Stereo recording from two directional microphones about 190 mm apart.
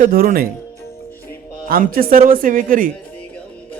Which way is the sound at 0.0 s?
50° right (ahead or behind).